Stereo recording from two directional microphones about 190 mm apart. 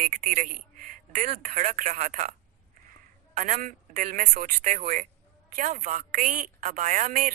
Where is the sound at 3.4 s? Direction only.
40° right (ahead or behind).